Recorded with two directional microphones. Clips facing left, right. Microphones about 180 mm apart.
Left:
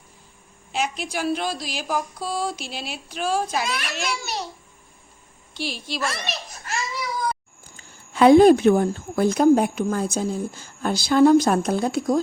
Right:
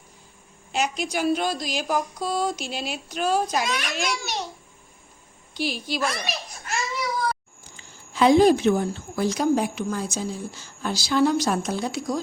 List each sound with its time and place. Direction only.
0.7 s a woman's voice: centre (ahead or behind)
5.5 s a woman's voice: centre (ahead or behind)
7.8 s a woman's voice: 60° left (ahead or behind)